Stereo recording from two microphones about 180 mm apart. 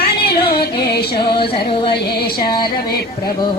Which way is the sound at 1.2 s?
25° left (ahead or behind).